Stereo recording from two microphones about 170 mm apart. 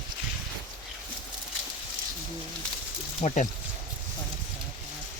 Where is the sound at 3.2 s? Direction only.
45° left (ahead or behind).